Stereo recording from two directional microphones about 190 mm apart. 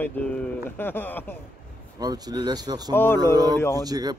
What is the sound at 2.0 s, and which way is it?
Speech, 20° right (ahead or behind).